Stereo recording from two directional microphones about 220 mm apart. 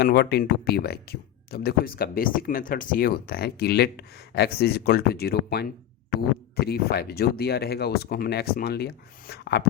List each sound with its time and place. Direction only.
0.0 s speech: 45° left (ahead or behind)